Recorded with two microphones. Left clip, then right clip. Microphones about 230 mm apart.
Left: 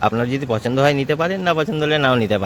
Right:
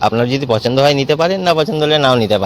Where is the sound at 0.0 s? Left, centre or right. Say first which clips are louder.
Right 5 dB; centre.